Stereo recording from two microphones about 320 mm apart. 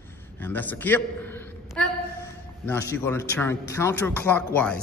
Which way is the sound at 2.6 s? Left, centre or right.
Centre.